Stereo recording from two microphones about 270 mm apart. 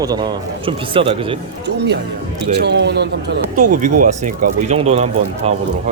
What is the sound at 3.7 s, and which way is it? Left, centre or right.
Speech, right.